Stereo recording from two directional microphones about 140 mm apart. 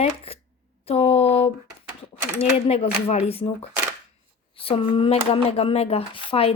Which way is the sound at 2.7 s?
50° left (ahead or behind).